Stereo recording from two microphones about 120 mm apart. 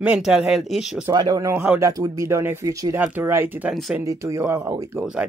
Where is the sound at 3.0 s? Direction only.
15° right (ahead or behind).